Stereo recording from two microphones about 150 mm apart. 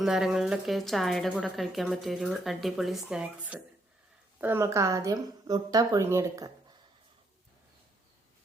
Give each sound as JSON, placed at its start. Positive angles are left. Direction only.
{"t": 0.0, "sound": "a woman's voice", "side_deg": -5}